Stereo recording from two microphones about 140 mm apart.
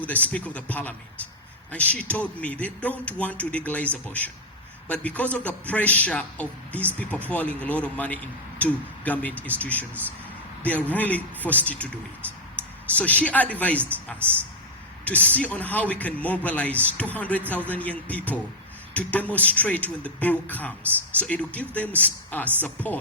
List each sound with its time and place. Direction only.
0.0 s a man's voice: 10° left (ahead or behind)
12.6 s a sound: 10° left (ahead or behind)
13.0 s a man's voice: 10° left (ahead or behind)
15.0 s a man's voice: 10° left (ahead or behind)